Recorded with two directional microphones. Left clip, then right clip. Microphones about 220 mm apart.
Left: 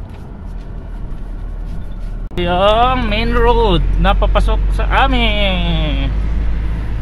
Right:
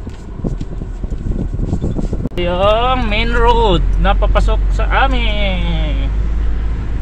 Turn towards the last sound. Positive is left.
turn(degrees=20)  # may be behind; listen again after turning